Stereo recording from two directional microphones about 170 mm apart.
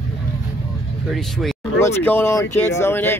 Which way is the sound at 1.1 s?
Centre (ahead or behind).